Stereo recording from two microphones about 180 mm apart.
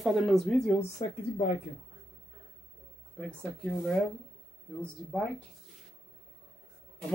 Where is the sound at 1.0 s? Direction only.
25° left (ahead or behind).